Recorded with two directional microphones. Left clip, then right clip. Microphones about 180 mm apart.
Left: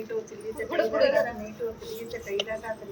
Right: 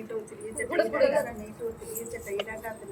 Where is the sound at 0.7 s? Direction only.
10° left (ahead or behind).